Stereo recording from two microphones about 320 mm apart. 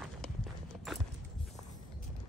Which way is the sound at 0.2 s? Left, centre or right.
Centre.